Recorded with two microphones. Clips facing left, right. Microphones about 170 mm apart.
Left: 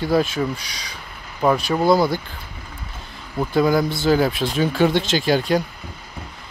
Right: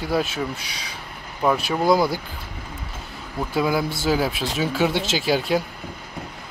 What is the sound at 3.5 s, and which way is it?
Speech, 5° right (ahead or behind).